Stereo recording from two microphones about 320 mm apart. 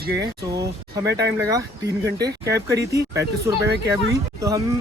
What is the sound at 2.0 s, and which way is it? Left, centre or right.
Speech, right.